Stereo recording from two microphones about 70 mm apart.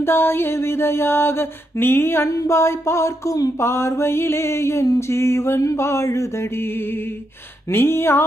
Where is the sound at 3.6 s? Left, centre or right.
Left.